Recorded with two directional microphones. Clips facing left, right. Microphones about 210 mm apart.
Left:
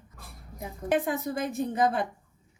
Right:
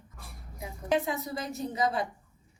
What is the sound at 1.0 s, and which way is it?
Speech, 55° left (ahead or behind).